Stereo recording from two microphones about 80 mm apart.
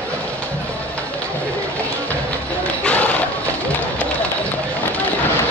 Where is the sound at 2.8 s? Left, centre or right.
Centre.